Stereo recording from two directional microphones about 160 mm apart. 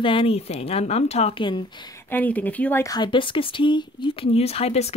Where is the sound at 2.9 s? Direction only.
30° left (ahead or behind).